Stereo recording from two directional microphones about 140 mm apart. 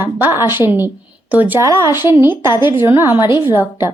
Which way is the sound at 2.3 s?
35° left (ahead or behind).